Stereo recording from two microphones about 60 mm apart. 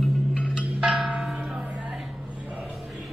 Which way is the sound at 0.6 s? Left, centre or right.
Centre.